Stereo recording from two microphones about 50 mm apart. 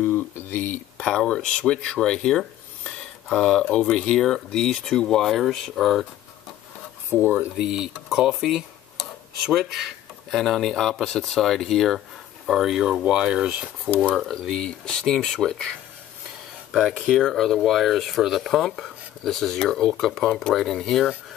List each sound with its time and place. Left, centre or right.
0.0 s speech: left
0.9 s speech: centre
5.4 s speech: centre
7.5 s speech: centre
12.4 s speech: centre
13.0 s speech: right
14.1 s speech: centre
14.5 s speech: centre
16.9 s speech: centre
20.0 s speech: centre